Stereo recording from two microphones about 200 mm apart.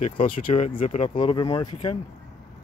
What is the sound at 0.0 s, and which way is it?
Speech, 30° left (ahead or behind).